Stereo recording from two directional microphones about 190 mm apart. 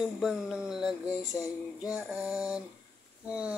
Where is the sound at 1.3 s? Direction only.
15° left (ahead or behind).